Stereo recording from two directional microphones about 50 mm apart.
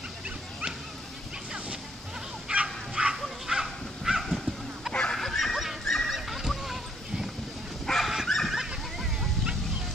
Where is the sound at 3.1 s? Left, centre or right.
Centre.